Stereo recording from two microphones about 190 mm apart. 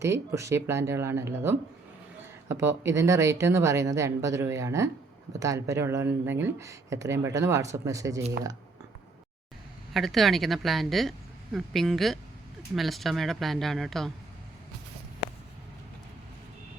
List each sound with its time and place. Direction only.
0.0 s speech: 15° right (ahead or behind)
9.9 s speech: centre (ahead or behind)